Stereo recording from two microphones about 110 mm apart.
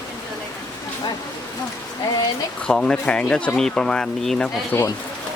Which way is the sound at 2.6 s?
5° left (ahead or behind).